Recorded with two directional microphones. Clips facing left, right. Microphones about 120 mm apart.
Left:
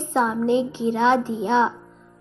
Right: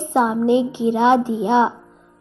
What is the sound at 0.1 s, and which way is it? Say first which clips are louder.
Speech: right 4 dB; 15° right (ahead or behind).